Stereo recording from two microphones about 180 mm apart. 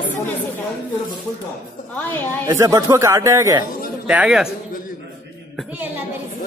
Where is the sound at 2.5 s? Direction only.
20° right (ahead or behind).